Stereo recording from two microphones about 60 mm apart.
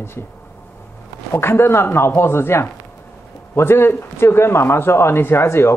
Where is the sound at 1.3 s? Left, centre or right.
Left.